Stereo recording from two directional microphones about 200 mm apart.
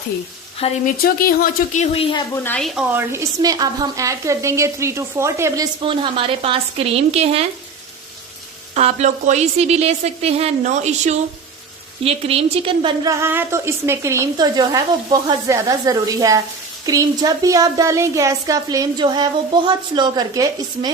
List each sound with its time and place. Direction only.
0.9 s speech: 45° left (ahead or behind); by 2.2 s 25° left (ahead or behind)
2.3 s speech: 10° left (ahead or behind)
2.9 s speech: 15° right (ahead or behind)
5.8 s a woman's voice: 25° right (ahead or behind)
8.7 s a woman's voice: 35° right (ahead or behind)
13.1 s speech: 15° right (ahead or behind)